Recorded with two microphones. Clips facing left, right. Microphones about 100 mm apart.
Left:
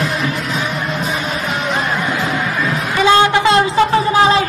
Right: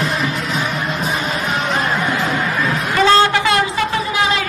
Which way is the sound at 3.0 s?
15° left (ahead or behind).